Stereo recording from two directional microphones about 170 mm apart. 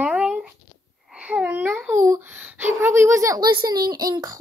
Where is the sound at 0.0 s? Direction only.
5° right (ahead or behind).